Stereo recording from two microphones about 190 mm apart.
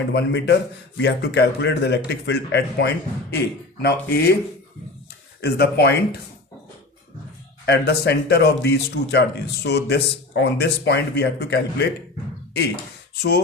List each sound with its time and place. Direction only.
0.1 s speech: 65° left (ahead or behind)
5.4 s speech: 60° left (ahead or behind)
7.6 s speech: 60° left (ahead or behind)